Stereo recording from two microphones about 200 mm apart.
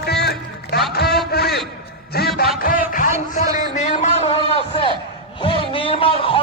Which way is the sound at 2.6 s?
40° left (ahead or behind).